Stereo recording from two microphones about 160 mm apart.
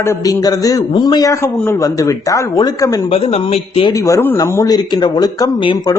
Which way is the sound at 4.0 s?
20° left (ahead or behind).